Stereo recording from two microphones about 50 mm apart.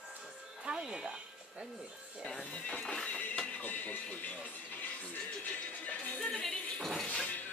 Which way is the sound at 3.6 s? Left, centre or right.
Left.